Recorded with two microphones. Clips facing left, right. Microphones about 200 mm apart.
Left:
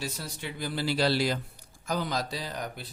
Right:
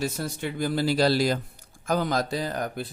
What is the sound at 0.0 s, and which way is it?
Speech, 50° right (ahead or behind).